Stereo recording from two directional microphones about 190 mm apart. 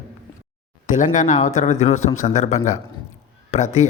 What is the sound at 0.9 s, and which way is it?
A man's voice, 40° left (ahead or behind).